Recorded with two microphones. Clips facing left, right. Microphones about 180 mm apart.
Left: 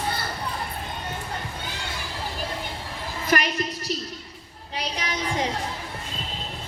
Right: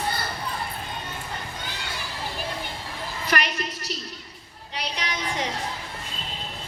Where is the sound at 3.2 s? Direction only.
40° left (ahead or behind).